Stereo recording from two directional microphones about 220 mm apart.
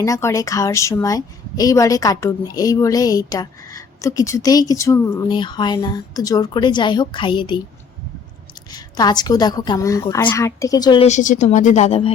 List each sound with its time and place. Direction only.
0.0 s a woman's voice: 15° left (ahead or behind)
8.7 s a woman's voice: 20° left (ahead or behind)